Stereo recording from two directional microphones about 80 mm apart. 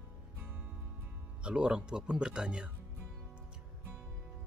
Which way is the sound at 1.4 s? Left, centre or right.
Centre.